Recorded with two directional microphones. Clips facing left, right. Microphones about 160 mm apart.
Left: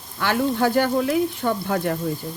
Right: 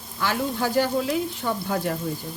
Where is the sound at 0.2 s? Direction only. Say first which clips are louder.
Left 5 dB; 60° left (ahead or behind).